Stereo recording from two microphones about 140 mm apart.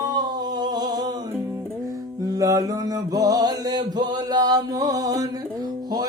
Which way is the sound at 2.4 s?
25° right (ahead or behind).